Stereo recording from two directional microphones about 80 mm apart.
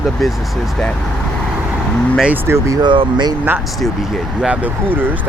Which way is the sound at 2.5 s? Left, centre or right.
Right.